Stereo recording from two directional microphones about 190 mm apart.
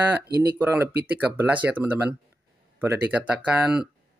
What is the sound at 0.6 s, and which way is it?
Speech, 10° right (ahead or behind).